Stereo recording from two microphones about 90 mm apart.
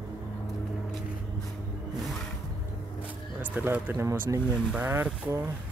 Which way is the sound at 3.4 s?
20° right (ahead or behind).